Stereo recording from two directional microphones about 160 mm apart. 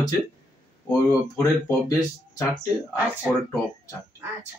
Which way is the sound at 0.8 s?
15° left (ahead or behind).